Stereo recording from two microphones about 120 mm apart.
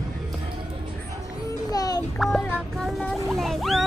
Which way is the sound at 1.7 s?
30° left (ahead or behind).